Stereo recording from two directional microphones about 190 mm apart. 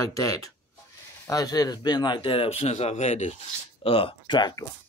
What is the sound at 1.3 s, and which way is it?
Speech, 20° left (ahead or behind).